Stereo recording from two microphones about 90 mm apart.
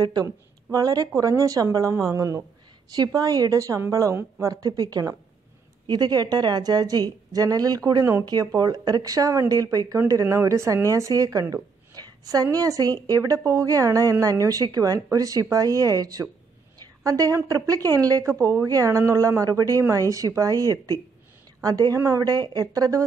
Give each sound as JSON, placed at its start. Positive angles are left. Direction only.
{"t": 0.0, "sound": "a woman's voice", "side_deg": -45}